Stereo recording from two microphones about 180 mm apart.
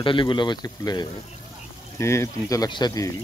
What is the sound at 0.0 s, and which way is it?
Speech, 25° left (ahead or behind).